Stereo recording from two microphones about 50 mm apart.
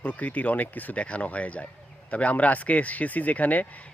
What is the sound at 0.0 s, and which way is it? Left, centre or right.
A man's voice, left.